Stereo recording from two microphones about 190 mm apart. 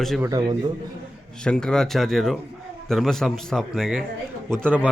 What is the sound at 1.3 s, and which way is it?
Speech, 5° left (ahead or behind).